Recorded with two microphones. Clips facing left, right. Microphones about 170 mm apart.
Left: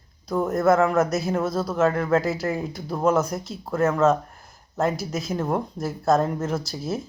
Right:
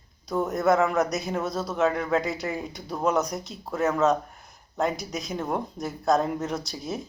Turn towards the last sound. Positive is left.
turn(degrees=0)  # may be behind; listen again after turning